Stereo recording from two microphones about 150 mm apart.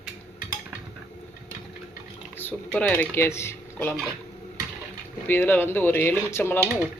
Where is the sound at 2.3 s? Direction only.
10° left (ahead or behind).